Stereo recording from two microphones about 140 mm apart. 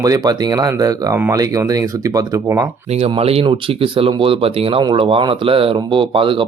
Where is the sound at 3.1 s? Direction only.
45° right (ahead or behind).